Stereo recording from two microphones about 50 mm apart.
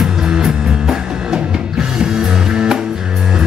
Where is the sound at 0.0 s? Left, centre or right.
Centre.